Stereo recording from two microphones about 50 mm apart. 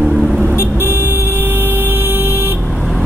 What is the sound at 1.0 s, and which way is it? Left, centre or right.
Vehicle, right.